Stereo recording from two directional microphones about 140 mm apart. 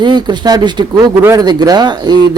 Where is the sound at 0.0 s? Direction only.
30° right (ahead or behind).